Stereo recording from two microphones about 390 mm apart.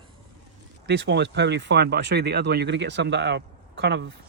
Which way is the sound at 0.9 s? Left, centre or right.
Right.